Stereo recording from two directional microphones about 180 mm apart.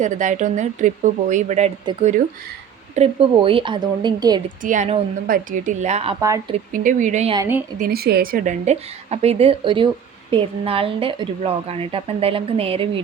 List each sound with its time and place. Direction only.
0.0 s a woman's voice: 40° right (ahead or behind)
2.9 s a woman's voice: 35° right (ahead or behind)
4.6 s a woman's voice: 45° right (ahead or behind)
7.3 s a woman's voice: 15° right (ahead or behind)
7.8 s a woman's voice: 60° right (ahead or behind); by 12.9 s 30° right (ahead or behind)